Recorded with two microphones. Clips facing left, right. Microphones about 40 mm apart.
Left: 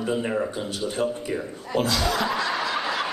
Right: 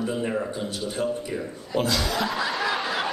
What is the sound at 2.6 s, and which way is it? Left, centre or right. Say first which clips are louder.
Snicker: even; centre.